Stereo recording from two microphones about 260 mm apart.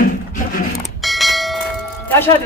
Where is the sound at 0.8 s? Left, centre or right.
Centre.